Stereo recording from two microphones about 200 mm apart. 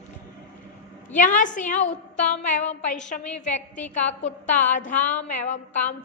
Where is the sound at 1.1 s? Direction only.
40° left (ahead or behind).